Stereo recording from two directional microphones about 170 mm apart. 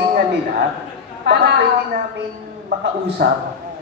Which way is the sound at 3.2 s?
70° right (ahead or behind).